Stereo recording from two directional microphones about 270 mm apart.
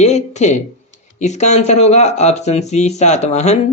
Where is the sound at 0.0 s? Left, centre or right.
Left.